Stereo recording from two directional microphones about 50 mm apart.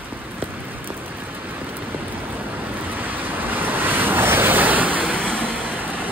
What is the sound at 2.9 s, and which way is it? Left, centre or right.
Vehicle, right.